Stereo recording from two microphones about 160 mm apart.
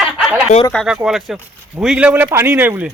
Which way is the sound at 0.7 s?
5° left (ahead or behind).